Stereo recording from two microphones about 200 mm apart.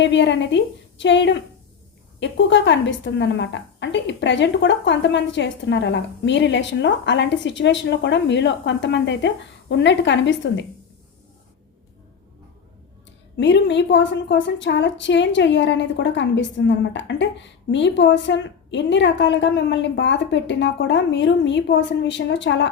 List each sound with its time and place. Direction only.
0.0 s a woman's voice: 60° left (ahead or behind)
13.3 s a woman's voice: 60° left (ahead or behind)